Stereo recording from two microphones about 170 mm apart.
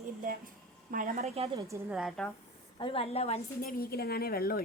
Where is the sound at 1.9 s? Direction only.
5° right (ahead or behind).